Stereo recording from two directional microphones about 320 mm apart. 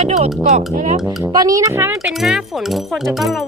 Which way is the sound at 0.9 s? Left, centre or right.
Centre.